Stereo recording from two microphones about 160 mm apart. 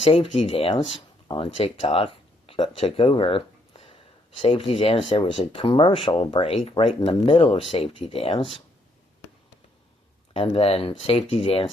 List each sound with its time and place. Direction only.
0.0 s speech: 35° left (ahead or behind)
10.3 s speech: 35° left (ahead or behind)